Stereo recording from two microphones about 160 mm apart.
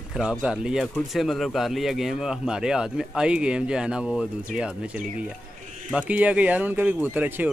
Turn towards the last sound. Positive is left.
turn(degrees=-10)  # may be behind; listen again after turning